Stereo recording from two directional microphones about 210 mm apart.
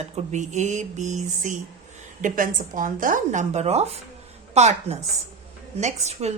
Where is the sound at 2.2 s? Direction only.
40° right (ahead or behind).